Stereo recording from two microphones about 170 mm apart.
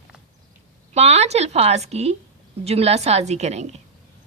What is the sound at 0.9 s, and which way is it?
A woman's voice, 40° right (ahead or behind).